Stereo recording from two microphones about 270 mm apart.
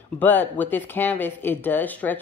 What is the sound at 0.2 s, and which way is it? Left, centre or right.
Speech, centre.